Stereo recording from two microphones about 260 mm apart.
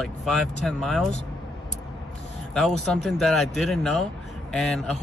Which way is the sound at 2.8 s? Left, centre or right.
Centre.